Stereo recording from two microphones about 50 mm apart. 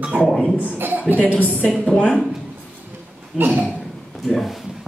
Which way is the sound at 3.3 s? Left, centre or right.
Right.